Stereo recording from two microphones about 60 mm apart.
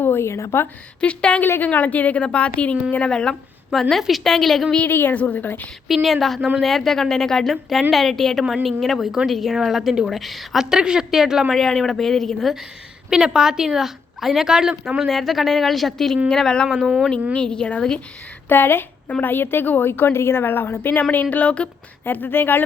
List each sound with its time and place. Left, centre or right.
0.0 s a woman's voice: left
1.0 s a woman's voice: centre
4.9 s a woman's voice: left
5.9 s a woman's voice: centre
11.5 s a woman's voice: centre
13.1 s a woman's voice: centre
18.4 s a woman's voice: left
22.0 s a woman's voice: left